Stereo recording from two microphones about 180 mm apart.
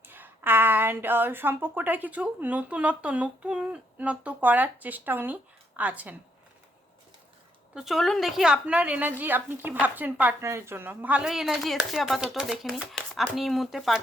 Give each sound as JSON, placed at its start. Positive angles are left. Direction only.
{"t": 0.1, "sound": "a woman's voice", "side_deg": -10}
{"t": 7.8, "sound": "a woman's voice", "side_deg": 0}